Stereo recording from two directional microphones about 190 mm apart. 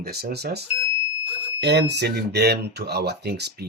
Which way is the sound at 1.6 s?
60° right (ahead or behind).